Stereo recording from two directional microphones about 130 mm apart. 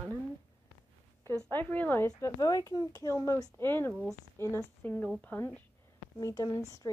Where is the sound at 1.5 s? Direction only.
15° left (ahead or behind).